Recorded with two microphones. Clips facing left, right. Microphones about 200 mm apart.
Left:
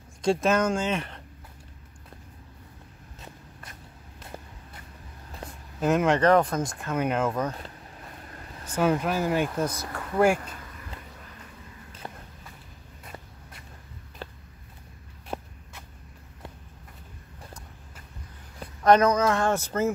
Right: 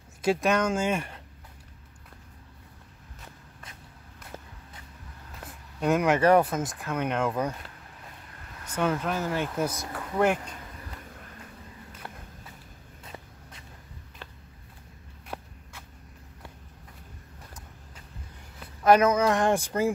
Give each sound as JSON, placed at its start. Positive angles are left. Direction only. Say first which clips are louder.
{"t": 0.2, "sound": "speech", "louder": "left 1 dB", "side_deg": 0}
{"t": 0.7, "sound": "speech", "louder": "right 1 dB", "side_deg": -10}
{"t": 5.8, "sound": "speech", "louder": "left 1 dB", "side_deg": 0}
{"t": 8.6, "sound": "speech", "louder": "left 3 dB", "side_deg": 10}
{"t": 12.0, "sound": "walk", "louder": "left 3 dB", "side_deg": 15}
{"t": 14.2, "sound": "a sound", "louder": "left 7 dB", "side_deg": 35}
{"t": 15.2, "sound": "walk", "louder": "left 4 dB", "side_deg": 25}
{"t": 18.8, "sound": "speech", "louder": "left 1 dB", "side_deg": -5}